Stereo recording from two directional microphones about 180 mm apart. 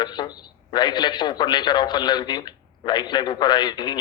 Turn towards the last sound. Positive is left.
turn(degrees=25)  # may be behind; listen again after turning